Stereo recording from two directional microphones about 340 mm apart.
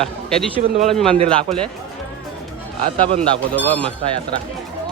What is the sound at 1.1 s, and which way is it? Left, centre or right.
Speech, centre.